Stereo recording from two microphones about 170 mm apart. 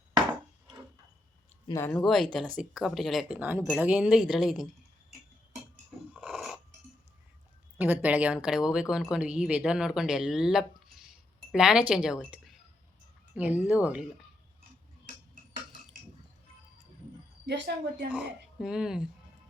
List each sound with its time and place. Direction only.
1.8 s speech: 5° left (ahead or behind)
6.1 s a sound: 5° right (ahead or behind)
7.8 s speech: 10° right (ahead or behind)
17.4 s speech: 90° right
18.1 s speech: 5° right (ahead or behind)